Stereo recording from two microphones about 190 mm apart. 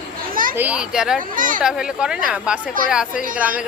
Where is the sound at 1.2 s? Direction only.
45° right (ahead or behind).